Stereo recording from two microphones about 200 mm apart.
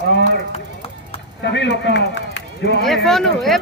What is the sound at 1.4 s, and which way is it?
A man's voice, 60° left (ahead or behind).